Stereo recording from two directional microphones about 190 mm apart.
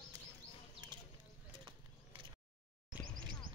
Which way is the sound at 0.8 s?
20° right (ahead or behind).